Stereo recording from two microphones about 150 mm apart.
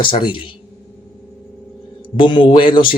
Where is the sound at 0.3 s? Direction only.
35° left (ahead or behind).